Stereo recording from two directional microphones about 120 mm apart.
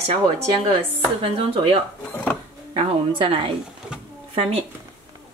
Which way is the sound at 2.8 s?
50° right (ahead or behind).